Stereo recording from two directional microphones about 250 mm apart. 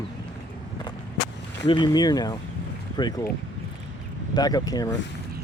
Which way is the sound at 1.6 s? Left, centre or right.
Centre.